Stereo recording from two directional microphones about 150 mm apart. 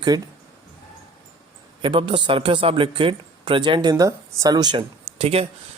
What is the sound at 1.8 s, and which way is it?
Speech, 35° right (ahead or behind).